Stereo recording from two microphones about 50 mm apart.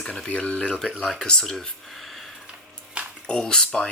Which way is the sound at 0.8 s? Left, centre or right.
Centre.